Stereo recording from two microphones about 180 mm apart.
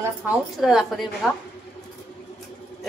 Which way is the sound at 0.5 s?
Centre (ahead or behind).